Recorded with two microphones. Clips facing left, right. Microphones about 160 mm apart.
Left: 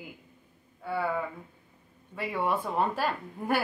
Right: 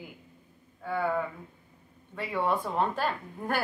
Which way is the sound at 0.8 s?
5° left (ahead or behind).